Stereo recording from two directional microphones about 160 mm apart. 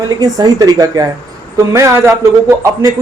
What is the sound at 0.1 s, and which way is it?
A man's voice, 25° right (ahead or behind).